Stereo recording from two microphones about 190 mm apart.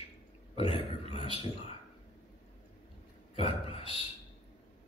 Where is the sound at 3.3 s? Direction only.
30° left (ahead or behind).